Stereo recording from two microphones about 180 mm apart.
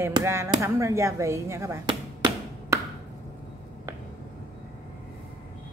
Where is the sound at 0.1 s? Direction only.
15° right (ahead or behind).